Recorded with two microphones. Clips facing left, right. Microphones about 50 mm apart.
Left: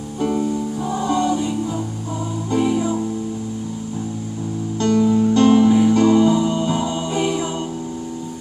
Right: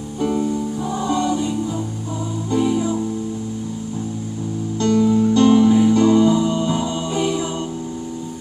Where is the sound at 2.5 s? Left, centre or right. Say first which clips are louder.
Even; left.